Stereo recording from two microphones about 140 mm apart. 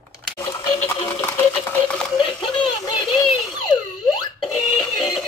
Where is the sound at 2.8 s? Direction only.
30° left (ahead or behind).